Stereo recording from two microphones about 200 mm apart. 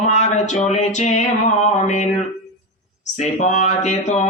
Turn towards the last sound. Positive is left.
turn(degrees=35)  # may be behind; listen again after turning